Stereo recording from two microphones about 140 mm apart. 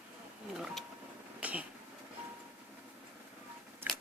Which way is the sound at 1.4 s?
10° right (ahead or behind).